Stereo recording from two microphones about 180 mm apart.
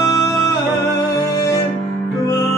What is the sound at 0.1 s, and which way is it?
Music, 20° left (ahead or behind).